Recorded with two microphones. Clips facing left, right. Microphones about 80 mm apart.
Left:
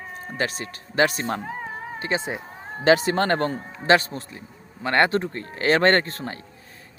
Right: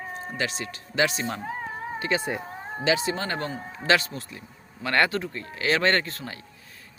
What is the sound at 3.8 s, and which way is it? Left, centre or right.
Speech, left.